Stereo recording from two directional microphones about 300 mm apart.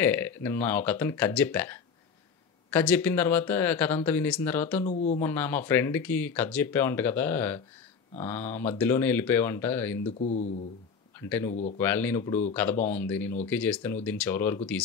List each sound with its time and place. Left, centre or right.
0.0 s speech: centre
4.8 s speech: left
5.2 s speech: centre
10.1 s speech: left
11.1 s speech: centre